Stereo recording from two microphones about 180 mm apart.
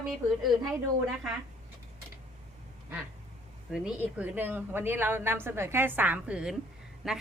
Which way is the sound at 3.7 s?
5° right (ahead or behind).